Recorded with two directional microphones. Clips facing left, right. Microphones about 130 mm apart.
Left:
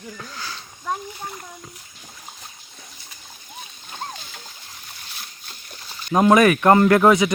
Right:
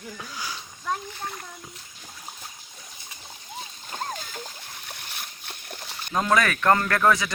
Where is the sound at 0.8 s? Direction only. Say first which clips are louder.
Left 2 dB; 10° left (ahead or behind).